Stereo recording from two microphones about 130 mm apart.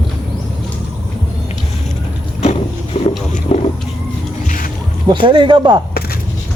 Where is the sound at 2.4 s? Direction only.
60° left (ahead or behind).